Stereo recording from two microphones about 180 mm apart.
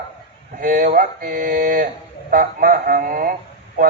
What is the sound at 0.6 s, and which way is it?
A man's voice, 50° right (ahead or behind).